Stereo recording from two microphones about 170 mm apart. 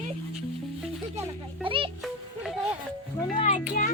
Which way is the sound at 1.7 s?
30° right (ahead or behind).